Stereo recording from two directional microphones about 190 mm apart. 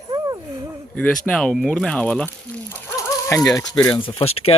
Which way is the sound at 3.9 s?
30° left (ahead or behind).